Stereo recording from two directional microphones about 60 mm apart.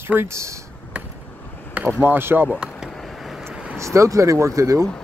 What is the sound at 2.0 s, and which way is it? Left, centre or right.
Speech, right.